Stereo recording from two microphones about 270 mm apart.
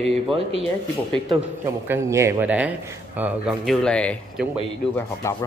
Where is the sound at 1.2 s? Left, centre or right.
Centre.